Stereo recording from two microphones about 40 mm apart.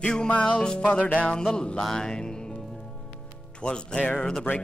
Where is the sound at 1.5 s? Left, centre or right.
Left.